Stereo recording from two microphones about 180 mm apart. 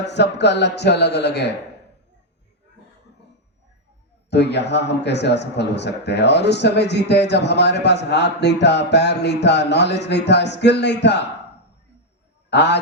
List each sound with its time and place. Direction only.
0.1 s a man's voice: 70° left (ahead or behind)
4.3 s a man's voice: 70° left (ahead or behind)
12.5 s a man's voice: 70° left (ahead or behind)